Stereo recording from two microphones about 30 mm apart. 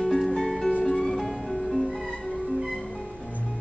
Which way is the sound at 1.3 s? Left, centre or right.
Centre.